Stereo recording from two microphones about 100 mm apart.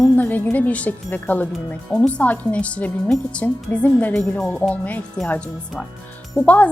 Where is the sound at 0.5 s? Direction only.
15° left (ahead or behind).